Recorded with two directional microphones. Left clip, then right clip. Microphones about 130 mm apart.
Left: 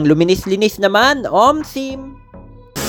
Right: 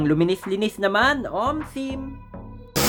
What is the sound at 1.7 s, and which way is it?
Speech, 35° left (ahead or behind).